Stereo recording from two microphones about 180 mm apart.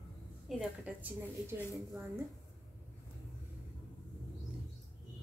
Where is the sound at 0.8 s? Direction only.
10° right (ahead or behind).